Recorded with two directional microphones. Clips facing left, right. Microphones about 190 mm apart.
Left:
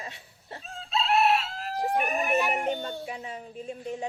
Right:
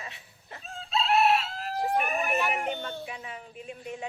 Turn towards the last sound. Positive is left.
turn(degrees=30)  # may be behind; listen again after turning